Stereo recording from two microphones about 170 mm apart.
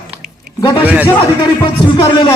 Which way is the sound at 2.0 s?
25° left (ahead or behind).